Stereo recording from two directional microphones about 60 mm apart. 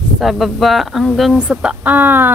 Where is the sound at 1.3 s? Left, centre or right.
Centre.